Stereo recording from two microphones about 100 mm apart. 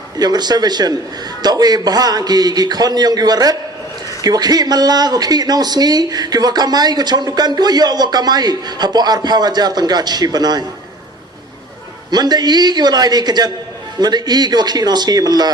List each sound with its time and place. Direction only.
0.2 s a man's voice: 45° right (ahead or behind)
12.1 s speech: 45° right (ahead or behind)